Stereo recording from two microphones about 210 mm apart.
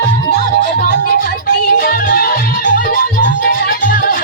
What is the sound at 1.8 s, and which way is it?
Music, 45° left (ahead or behind).